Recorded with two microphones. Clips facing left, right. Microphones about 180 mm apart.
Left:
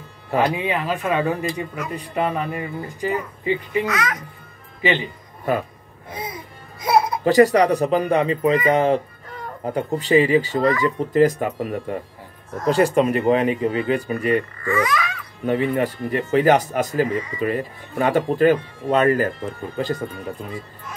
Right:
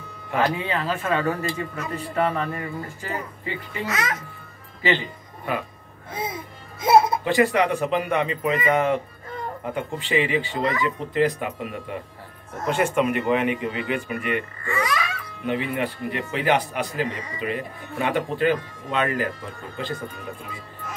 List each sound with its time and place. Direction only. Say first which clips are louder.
0.4 s speech: left 3 dB; 15° left (ahead or behind)
3.8 s a child's voice: left 3 dB; 25° right (ahead or behind)
4.8 s speech: left 2 dB; 15° left (ahead or behind)
5.5 s speech: left 6 dB; 40° left (ahead or behind)
6.1 s music: right 2 dB; 25° right (ahead or behind)
7.2 s speech: left 6 dB; 40° left (ahead or behind)
15.4 s speech: left 5 dB; 40° left (ahead or behind)